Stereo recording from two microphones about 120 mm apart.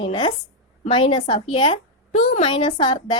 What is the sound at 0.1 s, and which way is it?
A woman's voice, 40° left (ahead or behind).